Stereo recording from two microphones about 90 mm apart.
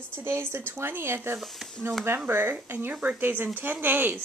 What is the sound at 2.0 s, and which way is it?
Speech, 25° right (ahead or behind).